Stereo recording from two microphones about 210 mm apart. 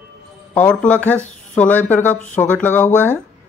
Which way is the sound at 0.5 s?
5° left (ahead or behind).